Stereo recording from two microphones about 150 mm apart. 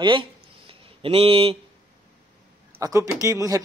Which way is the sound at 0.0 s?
35° right (ahead or behind).